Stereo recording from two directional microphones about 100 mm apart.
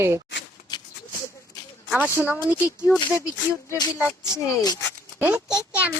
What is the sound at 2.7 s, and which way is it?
Speech, 25° left (ahead or behind).